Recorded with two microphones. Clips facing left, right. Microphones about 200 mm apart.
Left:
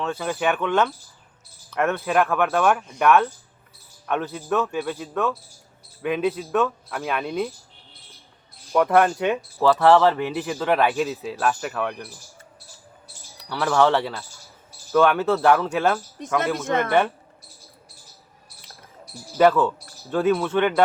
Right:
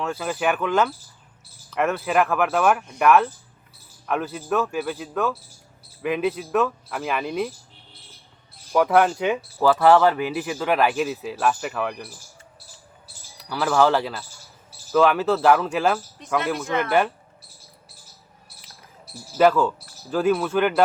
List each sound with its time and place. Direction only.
0.0 s speech: 5° right (ahead or behind)
8.7 s speech: centre (ahead or behind)
13.5 s speech: centre (ahead or behind)
16.2 s speech: 45° left (ahead or behind)
19.4 s speech: centre (ahead or behind)